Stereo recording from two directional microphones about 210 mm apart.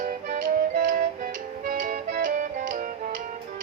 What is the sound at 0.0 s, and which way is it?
Music, 40° right (ahead or behind).